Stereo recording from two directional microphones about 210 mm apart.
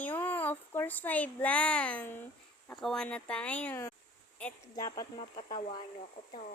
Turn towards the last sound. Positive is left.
turn(degrees=20)  # may be behind; listen again after turning